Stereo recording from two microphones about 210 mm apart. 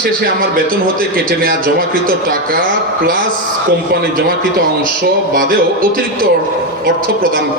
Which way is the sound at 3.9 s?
45° right (ahead or behind).